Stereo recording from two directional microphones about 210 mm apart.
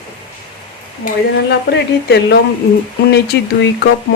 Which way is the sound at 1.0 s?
50° left (ahead or behind).